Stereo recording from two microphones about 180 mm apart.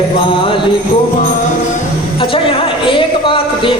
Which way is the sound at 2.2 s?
30° left (ahead or behind).